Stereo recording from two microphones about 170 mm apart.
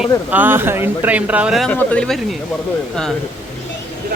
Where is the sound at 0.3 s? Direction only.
10° right (ahead or behind).